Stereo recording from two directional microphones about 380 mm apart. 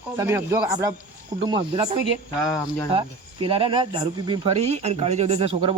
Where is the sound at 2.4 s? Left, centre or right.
Centre.